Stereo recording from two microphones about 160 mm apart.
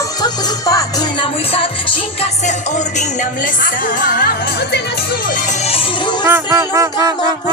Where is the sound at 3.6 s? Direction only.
60° left (ahead or behind).